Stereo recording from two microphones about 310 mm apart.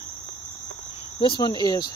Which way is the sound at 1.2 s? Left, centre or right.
Centre.